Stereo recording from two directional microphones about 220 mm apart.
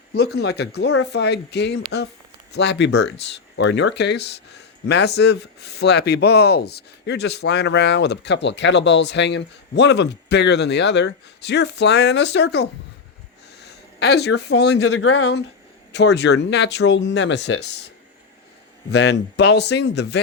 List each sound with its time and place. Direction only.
0.1 s speech: 45° left (ahead or behind)
14.9 s speech: 70° left (ahead or behind)
15.9 s speech: 50° left (ahead or behind)
17.5 s speech: 90° left
18.9 s speech: 50° left (ahead or behind)